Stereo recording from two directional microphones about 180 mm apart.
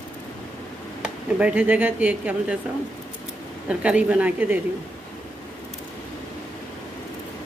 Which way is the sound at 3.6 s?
5° right (ahead or behind).